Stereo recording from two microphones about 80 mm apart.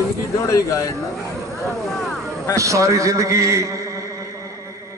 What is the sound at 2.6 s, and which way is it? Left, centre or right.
A man's voice, right.